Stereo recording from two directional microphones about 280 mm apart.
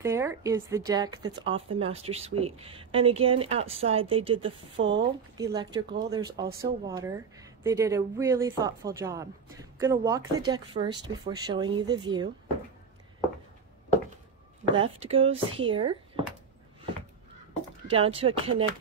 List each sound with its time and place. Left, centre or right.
0.0 s a woman's voice: centre; by 4.9 s right
5.4 s speech: centre
14.8 s a woman's voice: right
17.8 s a woman's voice: centre